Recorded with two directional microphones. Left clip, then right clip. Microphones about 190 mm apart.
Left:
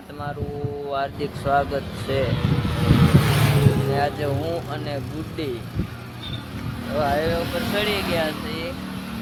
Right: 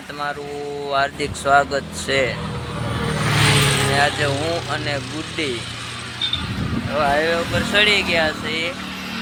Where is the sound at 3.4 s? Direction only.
45° left (ahead or behind).